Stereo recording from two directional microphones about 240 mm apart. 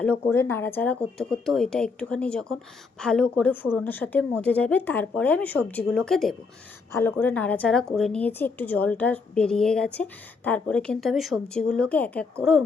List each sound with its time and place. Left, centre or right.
0.3 s a woman's voice: centre